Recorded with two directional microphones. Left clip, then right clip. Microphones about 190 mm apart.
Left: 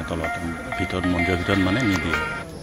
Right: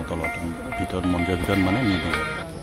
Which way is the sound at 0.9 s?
10° right (ahead or behind).